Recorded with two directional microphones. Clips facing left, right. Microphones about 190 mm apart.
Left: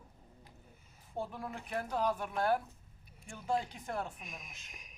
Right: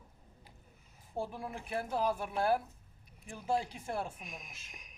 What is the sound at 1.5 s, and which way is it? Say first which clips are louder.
Speech: right 1 dB; 30° right (ahead or behind).